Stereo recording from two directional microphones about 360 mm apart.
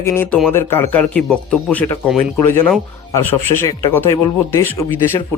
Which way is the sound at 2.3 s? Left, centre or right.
Left.